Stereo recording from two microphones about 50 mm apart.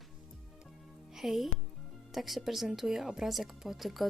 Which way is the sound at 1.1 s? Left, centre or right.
Centre.